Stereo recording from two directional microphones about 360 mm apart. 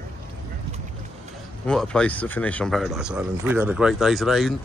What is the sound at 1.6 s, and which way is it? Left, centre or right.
Speech, centre.